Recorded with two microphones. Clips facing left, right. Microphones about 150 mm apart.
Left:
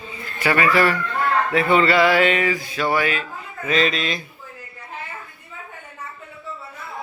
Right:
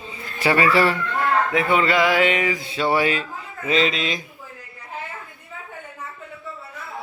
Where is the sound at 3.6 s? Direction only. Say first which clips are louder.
Even; 20° right (ahead or behind).